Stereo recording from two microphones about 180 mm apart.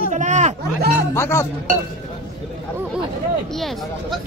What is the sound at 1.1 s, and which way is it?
Music, 15° left (ahead or behind).